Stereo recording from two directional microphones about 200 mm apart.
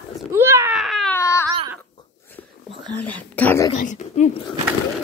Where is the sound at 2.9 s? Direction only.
10° left (ahead or behind).